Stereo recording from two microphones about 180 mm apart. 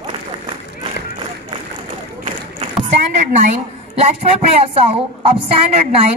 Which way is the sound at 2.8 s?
40° right (ahead or behind).